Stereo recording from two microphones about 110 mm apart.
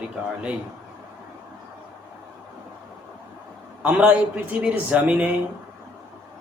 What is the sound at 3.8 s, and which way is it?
A man's voice, 10° right (ahead or behind).